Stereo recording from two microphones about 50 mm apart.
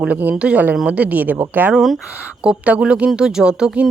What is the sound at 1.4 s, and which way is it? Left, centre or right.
Speech, right.